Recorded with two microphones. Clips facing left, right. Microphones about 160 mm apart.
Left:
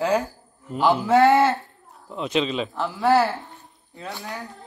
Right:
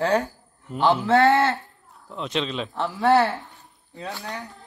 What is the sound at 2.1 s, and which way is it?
Speech, 5° left (ahead or behind).